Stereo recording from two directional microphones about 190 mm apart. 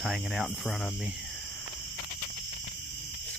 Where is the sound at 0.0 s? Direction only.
Centre (ahead or behind).